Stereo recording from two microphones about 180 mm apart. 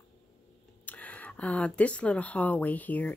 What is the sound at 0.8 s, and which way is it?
Speech, 10° left (ahead or behind).